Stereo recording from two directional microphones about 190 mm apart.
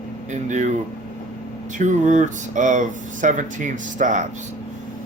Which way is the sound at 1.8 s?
40° right (ahead or behind).